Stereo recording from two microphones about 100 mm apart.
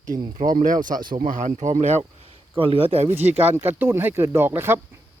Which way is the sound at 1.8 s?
90° right.